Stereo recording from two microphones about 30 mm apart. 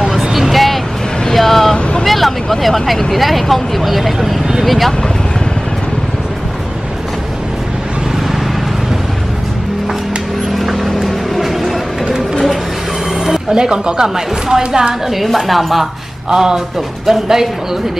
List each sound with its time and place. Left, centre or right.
0.1 s vehicle: centre
2.0 s a sound: centre
3.1 s speech: centre
10.5 s vehicle: centre
13.2 s a sound: centre
13.6 s a woman's voice: right
15.0 s speech: centre
16.3 s speech: right